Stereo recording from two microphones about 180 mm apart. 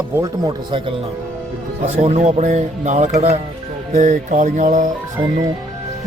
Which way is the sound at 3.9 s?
45° right (ahead or behind).